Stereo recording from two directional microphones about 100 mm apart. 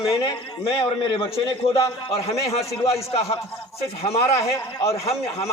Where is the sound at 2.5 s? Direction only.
90° left.